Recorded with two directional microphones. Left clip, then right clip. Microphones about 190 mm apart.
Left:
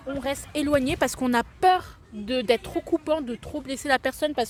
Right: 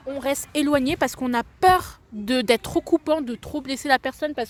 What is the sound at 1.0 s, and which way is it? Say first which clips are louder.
Speech: even; 10° right (ahead or behind).